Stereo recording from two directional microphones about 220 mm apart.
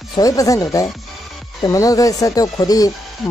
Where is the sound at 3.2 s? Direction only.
Centre (ahead or behind).